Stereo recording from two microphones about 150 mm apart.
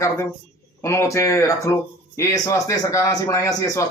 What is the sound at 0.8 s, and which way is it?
Speech, 20° left (ahead or behind).